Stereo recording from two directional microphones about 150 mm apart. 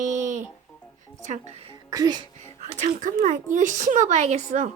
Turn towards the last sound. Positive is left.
turn(degrees=-50)  # may be behind; listen again after turning